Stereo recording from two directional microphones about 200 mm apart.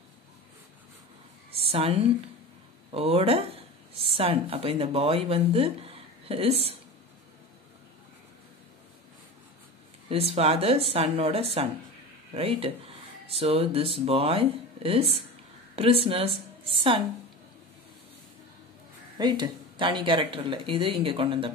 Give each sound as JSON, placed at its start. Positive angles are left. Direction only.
{"t": 1.5, "sound": "a woman's voice", "side_deg": -30}
{"t": 10.0, "sound": "a woman's voice", "side_deg": -30}
{"t": 19.1, "sound": "speech", "side_deg": -20}